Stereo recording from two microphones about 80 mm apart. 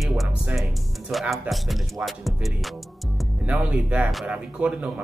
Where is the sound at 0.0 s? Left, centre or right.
Centre.